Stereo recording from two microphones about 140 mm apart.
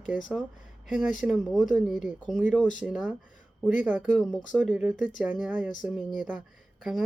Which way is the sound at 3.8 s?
10° right (ahead or behind).